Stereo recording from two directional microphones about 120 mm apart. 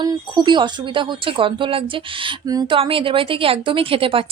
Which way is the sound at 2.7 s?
50° right (ahead or behind).